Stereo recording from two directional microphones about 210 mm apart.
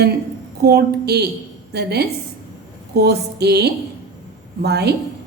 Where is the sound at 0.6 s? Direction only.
50° right (ahead or behind).